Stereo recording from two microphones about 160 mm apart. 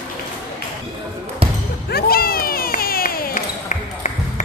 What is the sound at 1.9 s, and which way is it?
Basketball bounce, 70° left (ahead or behind).